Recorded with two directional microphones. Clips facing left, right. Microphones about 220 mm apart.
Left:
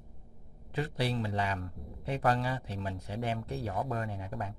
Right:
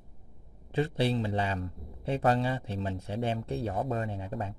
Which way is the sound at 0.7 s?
25° right (ahead or behind).